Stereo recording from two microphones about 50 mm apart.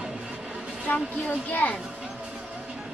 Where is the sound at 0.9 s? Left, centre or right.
Left.